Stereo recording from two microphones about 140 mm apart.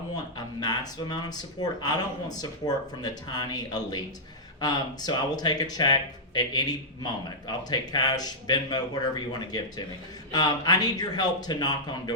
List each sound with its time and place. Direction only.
0.3 s speech: 30° left (ahead or behind)